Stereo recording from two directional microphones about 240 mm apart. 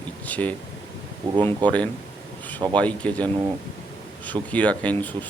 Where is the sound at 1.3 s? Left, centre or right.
Centre.